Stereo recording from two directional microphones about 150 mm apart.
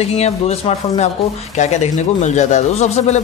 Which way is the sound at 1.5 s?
50° left (ahead or behind).